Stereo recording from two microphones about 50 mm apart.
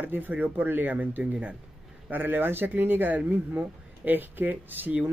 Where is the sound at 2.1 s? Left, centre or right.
Right.